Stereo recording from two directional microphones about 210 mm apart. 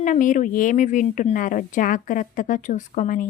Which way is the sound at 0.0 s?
40° left (ahead or behind).